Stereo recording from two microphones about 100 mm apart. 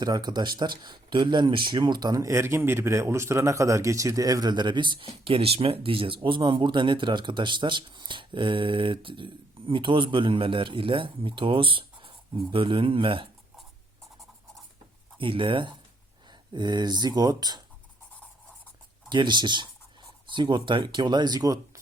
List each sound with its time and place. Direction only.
0.0 s speech: 45° right (ahead or behind); by 13.2 s 60° right (ahead or behind)
15.2 s speech: 60° right (ahead or behind)
19.0 s speech: 50° right (ahead or behind)